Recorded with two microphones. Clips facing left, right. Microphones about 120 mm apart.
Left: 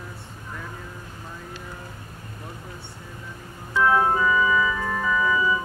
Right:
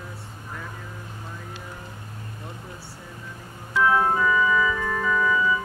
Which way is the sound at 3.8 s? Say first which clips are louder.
Left 1 dB; centre (ahead or behind).